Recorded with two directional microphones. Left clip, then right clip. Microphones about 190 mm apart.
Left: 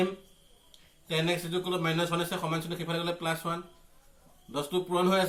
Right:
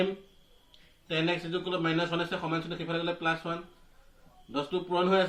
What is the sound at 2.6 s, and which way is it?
Speech, 25° left (ahead or behind).